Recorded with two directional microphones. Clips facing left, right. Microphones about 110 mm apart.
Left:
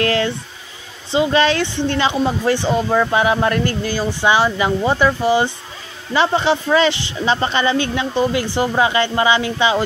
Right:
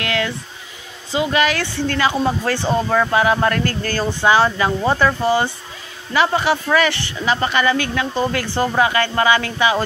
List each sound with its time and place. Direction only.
0.0 s a sound: 35° left (ahead or behind)
1.1 s speech: 30° left (ahead or behind)
6.1 s speech: 25° left (ahead or behind)